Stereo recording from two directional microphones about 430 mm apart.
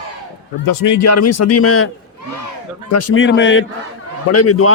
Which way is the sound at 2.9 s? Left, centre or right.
Left.